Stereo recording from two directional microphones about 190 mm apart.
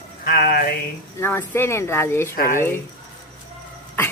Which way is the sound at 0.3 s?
50° left (ahead or behind).